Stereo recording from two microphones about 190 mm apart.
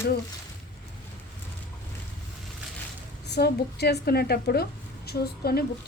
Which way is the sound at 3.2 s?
60° left (ahead or behind).